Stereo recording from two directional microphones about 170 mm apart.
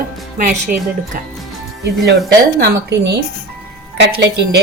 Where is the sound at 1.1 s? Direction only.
60° right (ahead or behind).